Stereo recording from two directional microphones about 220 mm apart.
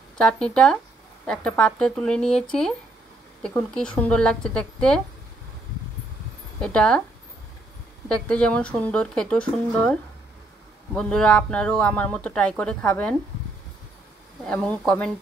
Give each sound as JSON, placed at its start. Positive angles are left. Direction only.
{"t": 0.2, "sound": "speech", "side_deg": 5}
{"t": 6.6, "sound": "speech", "side_deg": 5}
{"t": 8.1, "sound": "speech", "side_deg": 5}
{"t": 14.4, "sound": "speech", "side_deg": 5}